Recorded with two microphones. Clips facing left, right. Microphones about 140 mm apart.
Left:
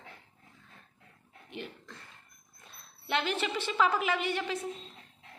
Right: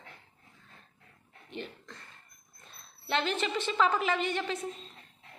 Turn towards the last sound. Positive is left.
turn(degrees=10)  # may be behind; listen again after turning